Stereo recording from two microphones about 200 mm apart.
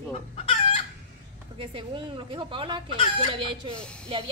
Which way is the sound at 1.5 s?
25° right (ahead or behind).